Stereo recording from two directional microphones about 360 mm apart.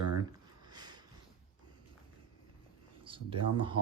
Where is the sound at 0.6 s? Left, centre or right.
Centre.